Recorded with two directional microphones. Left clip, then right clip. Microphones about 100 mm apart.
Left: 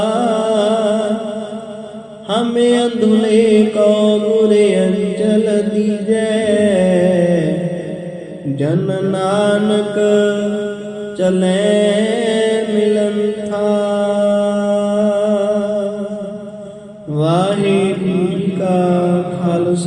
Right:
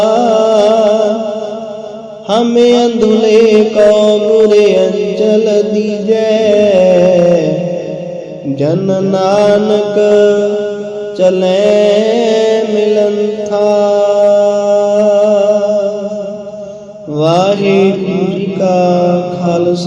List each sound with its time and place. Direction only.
0.0 s a sound: 25° right (ahead or behind)
2.3 s mantra: 25° right (ahead or behind)
6.1 s music: 30° right (ahead or behind)
8.6 s mantra: 25° right (ahead or behind)
11.2 s a sound: 25° right (ahead or behind)
17.2 s mantra: 25° right (ahead or behind)